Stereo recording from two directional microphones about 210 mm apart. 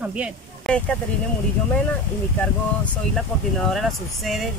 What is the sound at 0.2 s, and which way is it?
Speech, 5° left (ahead or behind).